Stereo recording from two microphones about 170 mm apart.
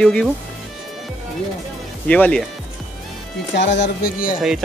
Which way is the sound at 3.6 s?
90° left.